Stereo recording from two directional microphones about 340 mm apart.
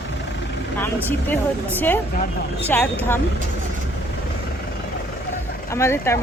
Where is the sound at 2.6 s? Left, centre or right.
Centre.